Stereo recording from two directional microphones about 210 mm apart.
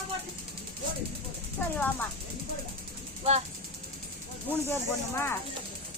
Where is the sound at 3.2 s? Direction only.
30° right (ahead or behind).